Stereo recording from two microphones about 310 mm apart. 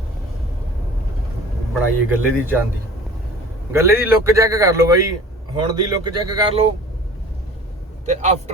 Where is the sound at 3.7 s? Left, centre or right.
Centre.